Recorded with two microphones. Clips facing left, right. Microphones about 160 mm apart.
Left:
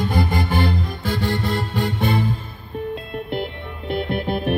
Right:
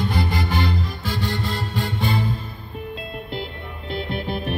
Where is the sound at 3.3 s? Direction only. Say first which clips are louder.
Left 4 dB; 60° left (ahead or behind).